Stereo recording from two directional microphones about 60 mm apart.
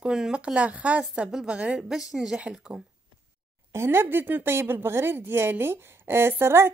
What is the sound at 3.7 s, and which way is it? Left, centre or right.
Speech, right.